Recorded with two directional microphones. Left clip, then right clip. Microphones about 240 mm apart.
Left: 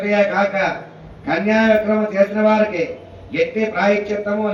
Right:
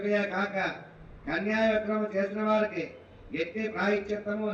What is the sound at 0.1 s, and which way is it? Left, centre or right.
A man's voice, right.